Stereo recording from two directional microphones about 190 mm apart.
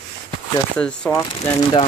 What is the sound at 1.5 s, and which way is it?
Speech, 25° left (ahead or behind).